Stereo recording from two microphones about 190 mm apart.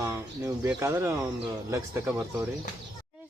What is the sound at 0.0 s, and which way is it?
Speech, 15° right (ahead or behind).